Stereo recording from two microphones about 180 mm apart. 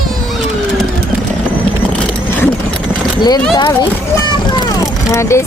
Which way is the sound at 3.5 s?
25° left (ahead or behind).